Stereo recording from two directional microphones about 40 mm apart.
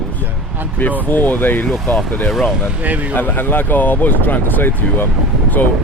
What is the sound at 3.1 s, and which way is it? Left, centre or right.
Speech, left.